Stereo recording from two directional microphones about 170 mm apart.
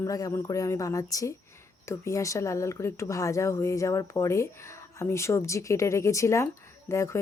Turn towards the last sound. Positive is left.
turn(degrees=15)  # may be behind; listen again after turning